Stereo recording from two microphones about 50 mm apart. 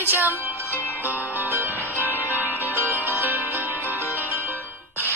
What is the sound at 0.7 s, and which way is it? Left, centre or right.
Music, left.